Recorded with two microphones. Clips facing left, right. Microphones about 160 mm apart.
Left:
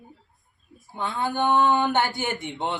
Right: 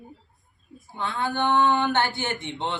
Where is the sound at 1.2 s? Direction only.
15° left (ahead or behind).